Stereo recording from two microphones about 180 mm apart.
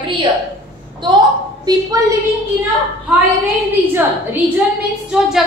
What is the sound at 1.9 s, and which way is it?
Speech, 20° right (ahead or behind).